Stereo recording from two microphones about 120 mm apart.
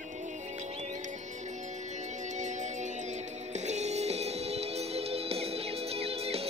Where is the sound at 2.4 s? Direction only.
80° right.